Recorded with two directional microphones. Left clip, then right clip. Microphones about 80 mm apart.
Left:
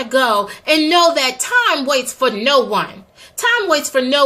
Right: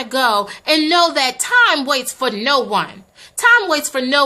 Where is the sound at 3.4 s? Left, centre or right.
Right.